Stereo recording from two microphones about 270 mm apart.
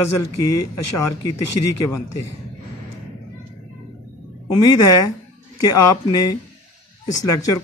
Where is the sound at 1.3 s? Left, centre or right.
Left.